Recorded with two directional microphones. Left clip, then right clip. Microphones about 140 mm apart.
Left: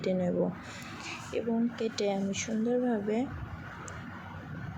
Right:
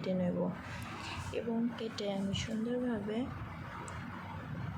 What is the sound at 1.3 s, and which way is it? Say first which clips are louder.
Speech: left 5 dB; 20° left (ahead or behind).